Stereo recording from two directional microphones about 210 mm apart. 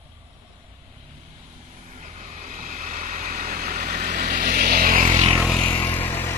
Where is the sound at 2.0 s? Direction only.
30° right (ahead or behind).